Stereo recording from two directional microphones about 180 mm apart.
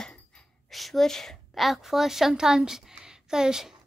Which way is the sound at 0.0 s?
5° left (ahead or behind).